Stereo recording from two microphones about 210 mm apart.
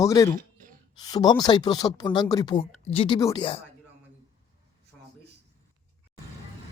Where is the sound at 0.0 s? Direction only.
15° left (ahead or behind).